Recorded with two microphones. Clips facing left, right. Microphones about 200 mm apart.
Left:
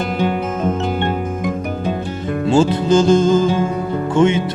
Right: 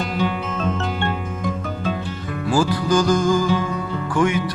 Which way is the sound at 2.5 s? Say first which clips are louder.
Left 5 dB; 25° left (ahead or behind).